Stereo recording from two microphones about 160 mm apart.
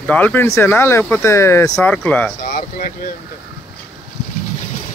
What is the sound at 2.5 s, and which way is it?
Speech, 55° left (ahead or behind).